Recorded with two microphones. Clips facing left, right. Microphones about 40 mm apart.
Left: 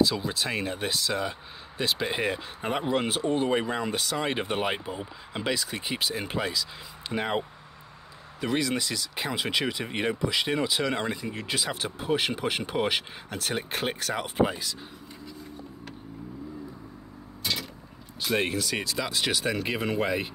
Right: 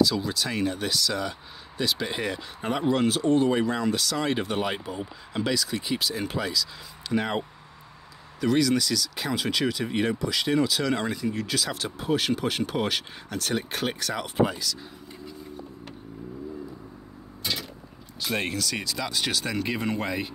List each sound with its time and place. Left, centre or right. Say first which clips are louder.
0.1 s speech: right 1 dB; left
17.4 s vehicle: even; centre
18.2 s speech: left 1 dB; centre